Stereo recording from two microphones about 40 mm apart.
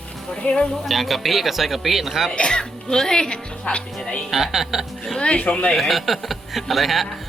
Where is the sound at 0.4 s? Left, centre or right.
Left.